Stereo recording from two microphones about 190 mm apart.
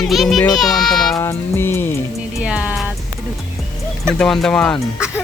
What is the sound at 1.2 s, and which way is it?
Music, 15° left (ahead or behind).